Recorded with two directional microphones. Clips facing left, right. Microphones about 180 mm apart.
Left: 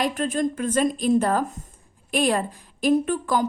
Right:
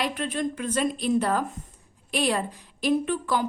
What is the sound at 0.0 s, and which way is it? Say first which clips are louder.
A woman's voice: left 4 dB; 45° left (ahead or behind).